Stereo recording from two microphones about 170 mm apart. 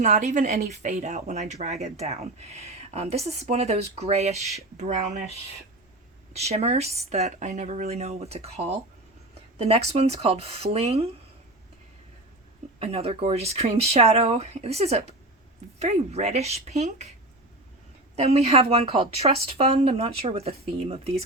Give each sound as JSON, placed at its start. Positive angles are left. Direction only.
{"t": 0.0, "sound": "speech", "side_deg": -45}
{"t": 6.3, "sound": "speech", "side_deg": -40}
{"t": 12.8, "sound": "speech", "side_deg": -35}
{"t": 18.2, "sound": "speech", "side_deg": -40}